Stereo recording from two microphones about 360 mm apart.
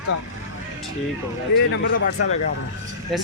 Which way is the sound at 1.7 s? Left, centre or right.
Left.